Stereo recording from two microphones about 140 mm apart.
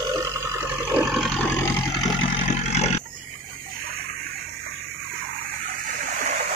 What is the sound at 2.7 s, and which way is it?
Roaring cats, 50° left (ahead or behind).